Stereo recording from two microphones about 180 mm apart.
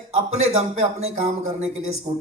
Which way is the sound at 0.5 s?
35° right (ahead or behind).